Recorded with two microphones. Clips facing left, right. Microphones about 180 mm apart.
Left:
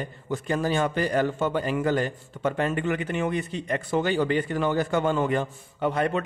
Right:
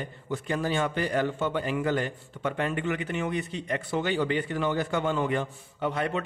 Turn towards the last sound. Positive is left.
turn(degrees=50)  # may be behind; listen again after turning